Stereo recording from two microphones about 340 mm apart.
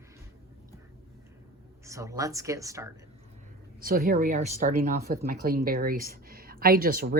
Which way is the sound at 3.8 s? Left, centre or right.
Right.